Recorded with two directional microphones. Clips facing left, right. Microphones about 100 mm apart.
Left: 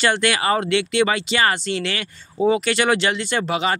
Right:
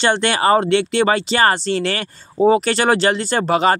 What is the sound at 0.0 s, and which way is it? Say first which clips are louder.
Speech: right 3 dB; 30° right (ahead or behind).